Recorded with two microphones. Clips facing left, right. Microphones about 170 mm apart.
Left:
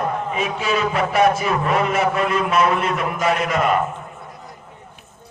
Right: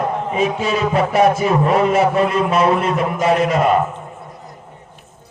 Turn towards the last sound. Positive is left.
turn(degrees=-30)  # may be behind; listen again after turning